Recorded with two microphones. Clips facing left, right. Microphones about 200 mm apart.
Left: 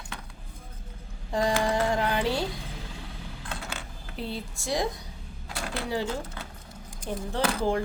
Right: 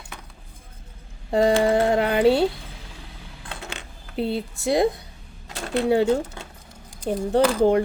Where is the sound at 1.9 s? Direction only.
60° right (ahead or behind).